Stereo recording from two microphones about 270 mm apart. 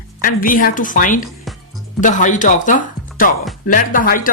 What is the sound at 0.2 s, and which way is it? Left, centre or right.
Speech, left.